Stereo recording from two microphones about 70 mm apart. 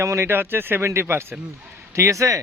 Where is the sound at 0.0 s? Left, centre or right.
Right.